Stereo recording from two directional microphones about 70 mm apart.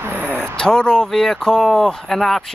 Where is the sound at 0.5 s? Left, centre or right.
Centre.